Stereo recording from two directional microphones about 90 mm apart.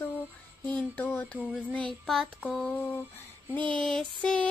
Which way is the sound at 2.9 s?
25° left (ahead or behind).